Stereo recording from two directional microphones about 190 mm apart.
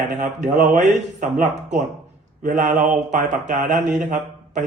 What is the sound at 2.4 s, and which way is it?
Speech, 40° right (ahead or behind).